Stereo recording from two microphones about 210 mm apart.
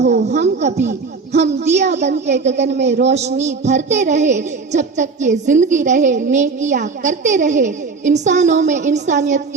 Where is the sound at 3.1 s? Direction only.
30° right (ahead or behind).